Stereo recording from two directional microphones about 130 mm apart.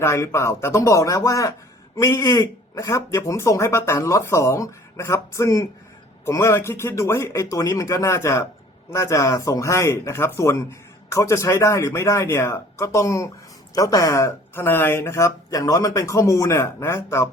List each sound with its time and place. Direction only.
0.0 s speech: 20° left (ahead or behind)